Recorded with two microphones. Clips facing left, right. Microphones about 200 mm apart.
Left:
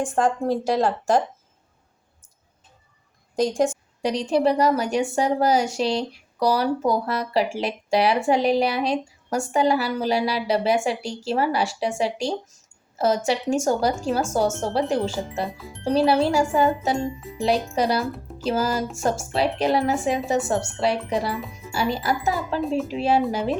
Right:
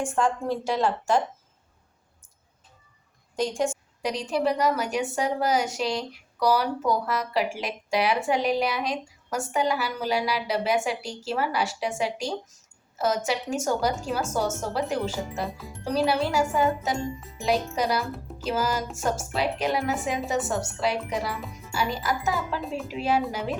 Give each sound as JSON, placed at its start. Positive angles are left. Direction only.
{"t": 0.0, "sound": "a woman's voice", "side_deg": 40}
{"t": 3.3, "sound": "a woman's voice", "side_deg": 40}
{"t": 18.1, "sound": "speech", "side_deg": 0}
{"t": 18.4, "sound": "a woman's voice", "side_deg": 30}
{"t": 22.6, "sound": "a woman's voice", "side_deg": 0}
{"t": 23.0, "sound": "a woman's voice", "side_deg": 30}